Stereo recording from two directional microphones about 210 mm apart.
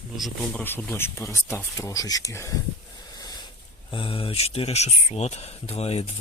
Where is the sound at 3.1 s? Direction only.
20° left (ahead or behind).